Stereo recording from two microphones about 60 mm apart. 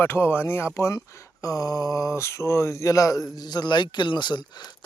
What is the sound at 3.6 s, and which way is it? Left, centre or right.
Speech, left.